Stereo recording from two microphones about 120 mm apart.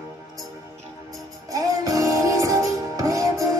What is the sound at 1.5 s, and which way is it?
Music, 30° right (ahead or behind).